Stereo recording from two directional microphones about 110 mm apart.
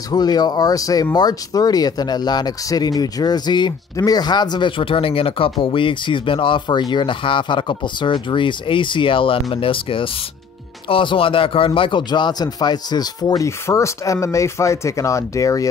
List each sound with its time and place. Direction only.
0.1 s speech: 35° left (ahead or behind)
13.5 s speech: 25° left (ahead or behind)